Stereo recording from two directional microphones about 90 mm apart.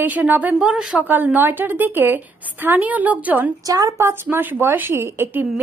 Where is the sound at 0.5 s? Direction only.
5° right (ahead or behind).